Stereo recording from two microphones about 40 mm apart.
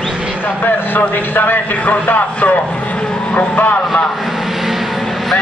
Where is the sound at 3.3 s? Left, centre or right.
Left.